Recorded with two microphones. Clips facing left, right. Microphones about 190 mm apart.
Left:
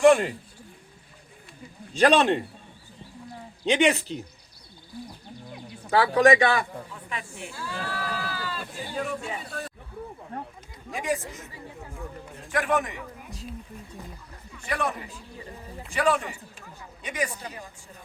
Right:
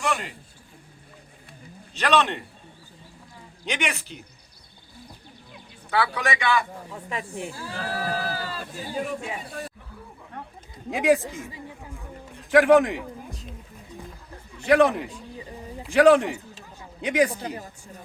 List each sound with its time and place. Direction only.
0.0 s a man's voice: 45° left (ahead or behind)
2.0 s speech: 35° left (ahead or behind)
3.7 s speech: 35° left (ahead or behind)
5.9 s speech: 40° left (ahead or behind)
6.9 s sheep: 40° right (ahead or behind)
9.2 s speech: 10° right (ahead or behind)
10.3 s a sound: 35° left (ahead or behind)
12.5 s a man's voice: 90° right
14.6 s a man's voice: 85° right
17.4 s speech: 35° right (ahead or behind)